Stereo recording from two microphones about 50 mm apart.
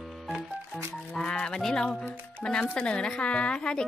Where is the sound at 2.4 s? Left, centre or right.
Centre.